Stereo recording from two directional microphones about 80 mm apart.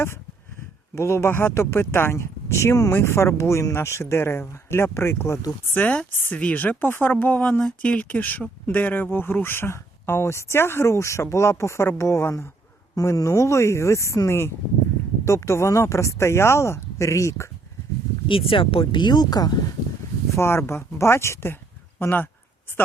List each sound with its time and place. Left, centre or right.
0.9 s speech: left
5.7 s speech: centre; by 12.5 s left
13.0 s speech: left
18.3 s speech: left
20.3 s speech: left